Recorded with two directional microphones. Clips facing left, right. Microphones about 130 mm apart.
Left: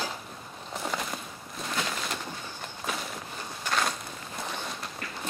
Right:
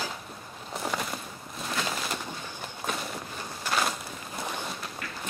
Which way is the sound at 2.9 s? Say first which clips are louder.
Right 1 dB; centre (ahead or behind).